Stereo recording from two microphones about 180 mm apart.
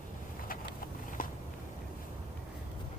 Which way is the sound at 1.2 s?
50° left (ahead or behind).